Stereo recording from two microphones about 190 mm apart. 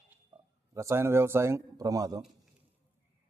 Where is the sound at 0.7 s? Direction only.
15° right (ahead or behind).